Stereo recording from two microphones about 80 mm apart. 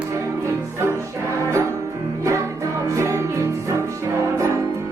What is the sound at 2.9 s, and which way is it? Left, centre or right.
Music, right.